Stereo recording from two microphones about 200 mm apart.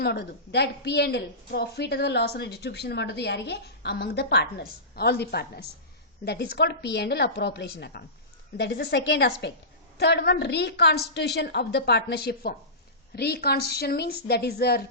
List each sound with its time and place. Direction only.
0.0 s a woman's voice: 55° left (ahead or behind)